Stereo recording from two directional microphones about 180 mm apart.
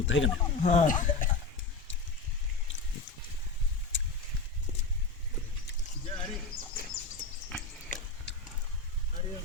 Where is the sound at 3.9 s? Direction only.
90° left.